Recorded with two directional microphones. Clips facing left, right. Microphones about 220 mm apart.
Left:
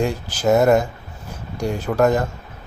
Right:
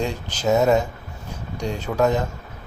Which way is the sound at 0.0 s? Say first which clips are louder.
Left 4 dB; 10° left (ahead or behind).